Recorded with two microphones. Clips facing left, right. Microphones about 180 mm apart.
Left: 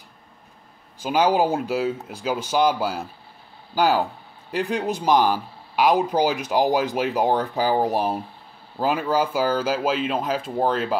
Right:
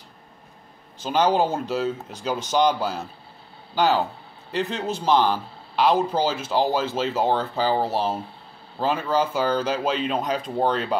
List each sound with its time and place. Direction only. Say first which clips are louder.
1.0 s speech: left 1 dB; 10° left (ahead or behind)